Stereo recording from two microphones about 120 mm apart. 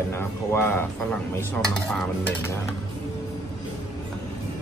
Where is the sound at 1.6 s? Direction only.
5° left (ahead or behind).